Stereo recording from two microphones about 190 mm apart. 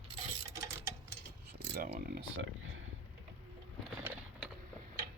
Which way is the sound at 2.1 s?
80° right.